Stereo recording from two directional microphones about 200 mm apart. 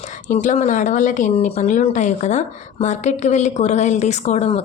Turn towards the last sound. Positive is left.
turn(degrees=35)  # may be behind; listen again after turning